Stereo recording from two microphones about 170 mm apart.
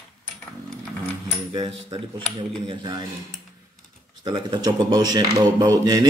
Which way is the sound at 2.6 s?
25° right (ahead or behind).